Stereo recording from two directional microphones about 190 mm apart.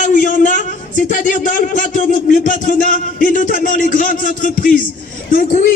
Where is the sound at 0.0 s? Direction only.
45° left (ahead or behind).